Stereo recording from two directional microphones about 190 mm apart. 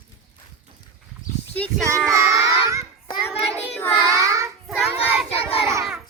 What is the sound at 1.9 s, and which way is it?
Child singing, 15° right (ahead or behind).